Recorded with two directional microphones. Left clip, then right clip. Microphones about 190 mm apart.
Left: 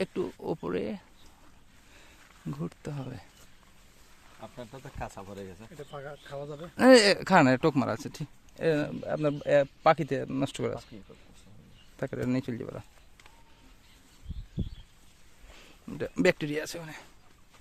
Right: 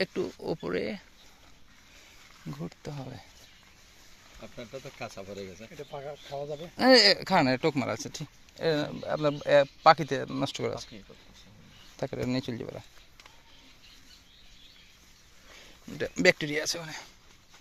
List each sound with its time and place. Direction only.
0.0 s speech: 15° left (ahead or behind)
2.5 s speech: 30° left (ahead or behind)
5.9 s speech: 5° left (ahead or behind)
6.7 s speech: 35° left (ahead or behind)
10.6 s speech: 15° left (ahead or behind)
11.9 s speech: 15° left (ahead or behind)
16.1 s speech: 20° left (ahead or behind)